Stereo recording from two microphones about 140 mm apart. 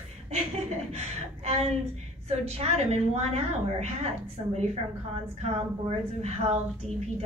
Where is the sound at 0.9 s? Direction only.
50° right (ahead or behind).